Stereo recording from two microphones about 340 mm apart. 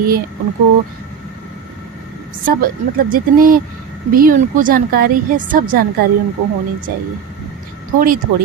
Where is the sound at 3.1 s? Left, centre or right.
Right.